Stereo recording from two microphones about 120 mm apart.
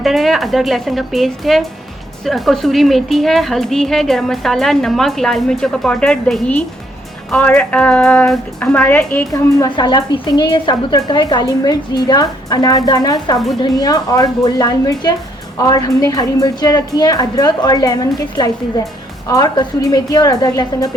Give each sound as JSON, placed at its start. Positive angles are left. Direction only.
{"t": 0.0, "sound": "a woman's voice", "side_deg": 0}
{"t": 9.3, "sound": "a woman's voice", "side_deg": 35}